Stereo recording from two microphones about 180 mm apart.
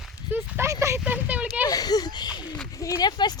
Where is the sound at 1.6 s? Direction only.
20° left (ahead or behind).